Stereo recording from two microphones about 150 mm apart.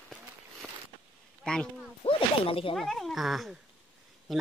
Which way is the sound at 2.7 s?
Centre (ahead or behind).